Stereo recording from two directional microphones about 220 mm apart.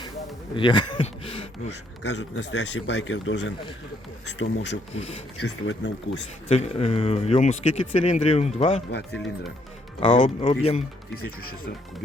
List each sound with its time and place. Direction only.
0.5 s speech: 20° left (ahead or behind)
2.0 s speech: 50° left (ahead or behind)
4.9 s speech: 25° left (ahead or behind)
5.4 s speech: 55° left (ahead or behind)
6.5 s speech: 25° left (ahead or behind)
9.1 s speech: centre (ahead or behind)
10.2 s speech: 25° left (ahead or behind)